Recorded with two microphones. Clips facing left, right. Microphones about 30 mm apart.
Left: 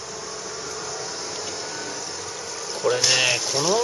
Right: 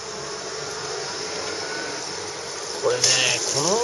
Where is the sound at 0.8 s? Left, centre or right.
Right.